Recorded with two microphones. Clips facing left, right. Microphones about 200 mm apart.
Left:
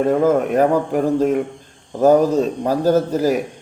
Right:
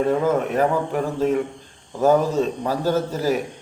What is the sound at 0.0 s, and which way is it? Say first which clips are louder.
A man's voice: left 4 dB; 45° left (ahead or behind).